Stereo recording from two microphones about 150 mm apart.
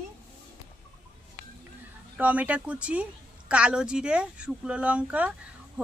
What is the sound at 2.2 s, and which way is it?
Speech, 10° right (ahead or behind).